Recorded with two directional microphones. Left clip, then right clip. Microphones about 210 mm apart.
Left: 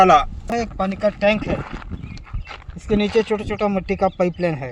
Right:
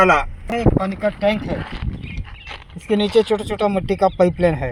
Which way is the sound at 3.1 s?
35° right (ahead or behind).